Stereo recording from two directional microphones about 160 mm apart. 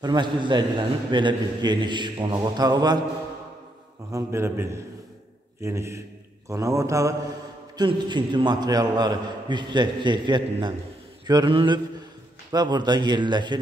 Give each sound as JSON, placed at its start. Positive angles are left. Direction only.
{"t": 0.0, "sound": "a man's voice", "side_deg": -25}
{"t": 4.1, "sound": "a man's voice", "side_deg": -15}